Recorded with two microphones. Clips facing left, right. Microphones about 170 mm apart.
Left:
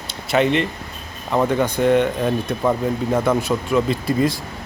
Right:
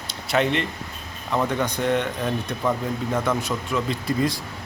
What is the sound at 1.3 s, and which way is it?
Speech, 30° left (ahead or behind).